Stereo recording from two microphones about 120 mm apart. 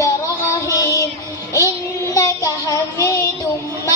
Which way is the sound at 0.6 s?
25° left (ahead or behind).